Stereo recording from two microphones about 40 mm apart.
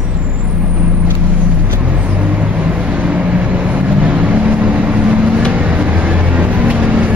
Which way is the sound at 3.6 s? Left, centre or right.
Right.